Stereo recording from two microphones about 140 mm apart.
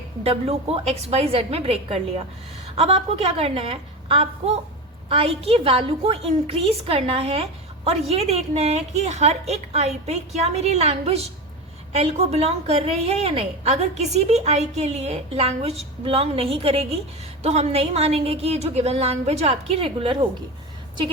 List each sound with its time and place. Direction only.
0.2 s a woman's voice: 45° right (ahead or behind)